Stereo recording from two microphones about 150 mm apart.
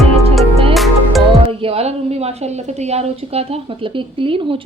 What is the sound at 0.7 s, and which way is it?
Music, centre (ahead or behind).